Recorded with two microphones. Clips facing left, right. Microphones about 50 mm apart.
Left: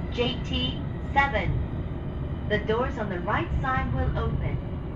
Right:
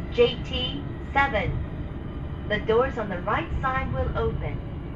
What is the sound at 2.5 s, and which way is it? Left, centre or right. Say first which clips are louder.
Speech: right 4 dB; right.